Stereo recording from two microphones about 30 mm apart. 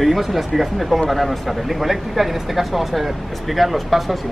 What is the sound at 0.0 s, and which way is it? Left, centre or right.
Speech, centre.